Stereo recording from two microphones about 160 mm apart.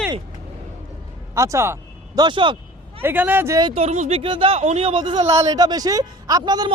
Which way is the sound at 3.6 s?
40° right (ahead or behind).